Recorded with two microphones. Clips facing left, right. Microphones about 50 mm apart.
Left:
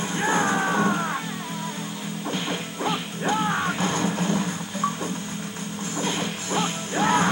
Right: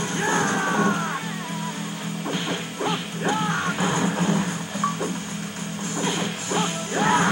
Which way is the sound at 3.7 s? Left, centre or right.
Centre.